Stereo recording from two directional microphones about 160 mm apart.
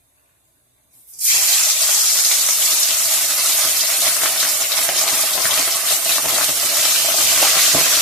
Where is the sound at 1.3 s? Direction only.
Centre (ahead or behind).